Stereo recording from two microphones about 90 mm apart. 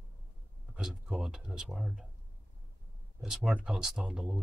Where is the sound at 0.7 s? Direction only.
10° right (ahead or behind).